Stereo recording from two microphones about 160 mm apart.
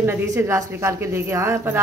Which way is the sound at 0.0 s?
15° right (ahead or behind).